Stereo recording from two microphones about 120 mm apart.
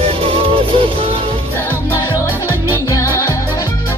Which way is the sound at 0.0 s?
55° right (ahead or behind).